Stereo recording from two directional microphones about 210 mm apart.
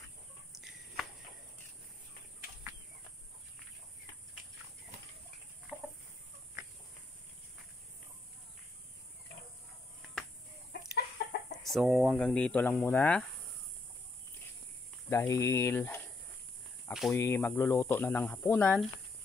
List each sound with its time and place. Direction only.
0.5 s a sound: centre (ahead or behind)
5.7 s chicken: 5° right (ahead or behind)
11.2 s chicken: 50° left (ahead or behind)
11.7 s speech: centre (ahead or behind)
15.0 s speech: 10° left (ahead or behind)
17.1 s speech: 10° left (ahead or behind)